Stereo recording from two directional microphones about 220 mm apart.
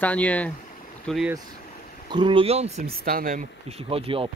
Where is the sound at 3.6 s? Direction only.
25° right (ahead or behind).